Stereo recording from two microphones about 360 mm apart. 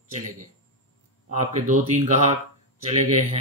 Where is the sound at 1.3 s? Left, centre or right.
Centre.